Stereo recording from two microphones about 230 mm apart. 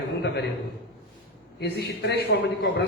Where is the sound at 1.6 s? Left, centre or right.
Left.